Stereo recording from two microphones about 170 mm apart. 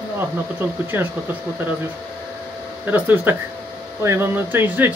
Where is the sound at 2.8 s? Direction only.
10° right (ahead or behind).